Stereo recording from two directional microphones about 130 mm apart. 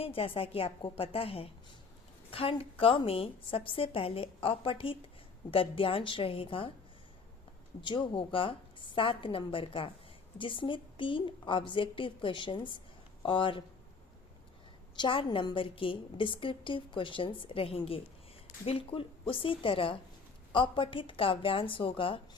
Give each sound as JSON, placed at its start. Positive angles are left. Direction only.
{"t": 0.0, "sound": "a woman's voice", "side_deg": 45}
{"t": 7.8, "sound": "a woman's voice", "side_deg": 40}
{"t": 14.9, "sound": "a woman's voice", "side_deg": 40}